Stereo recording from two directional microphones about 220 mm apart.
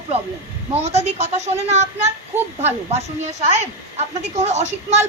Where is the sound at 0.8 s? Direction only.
30° right (ahead or behind).